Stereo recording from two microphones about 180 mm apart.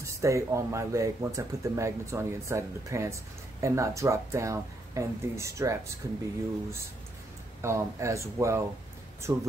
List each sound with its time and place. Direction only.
0.0 s speech: 15° right (ahead or behind)
7.6 s speech: 15° right (ahead or behind)